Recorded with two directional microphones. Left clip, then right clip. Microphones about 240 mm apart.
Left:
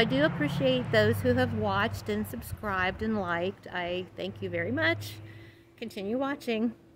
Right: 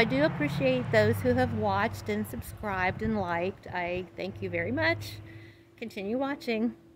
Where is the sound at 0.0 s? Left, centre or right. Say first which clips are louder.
Even; centre.